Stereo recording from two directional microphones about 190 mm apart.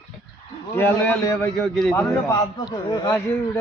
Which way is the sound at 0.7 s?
10° left (ahead or behind).